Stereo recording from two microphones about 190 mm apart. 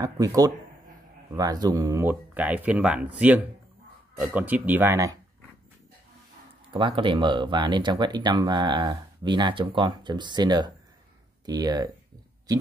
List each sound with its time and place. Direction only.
0.0 s speech: 20° right (ahead or behind)
6.7 s speech: 25° right (ahead or behind)